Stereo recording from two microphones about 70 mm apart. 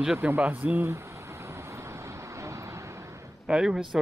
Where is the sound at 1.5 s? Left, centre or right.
Right.